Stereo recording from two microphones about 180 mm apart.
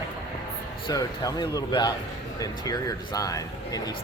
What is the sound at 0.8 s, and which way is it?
Speech, 20° left (ahead or behind).